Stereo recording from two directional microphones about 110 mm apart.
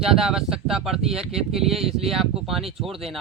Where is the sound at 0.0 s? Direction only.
5° right (ahead or behind).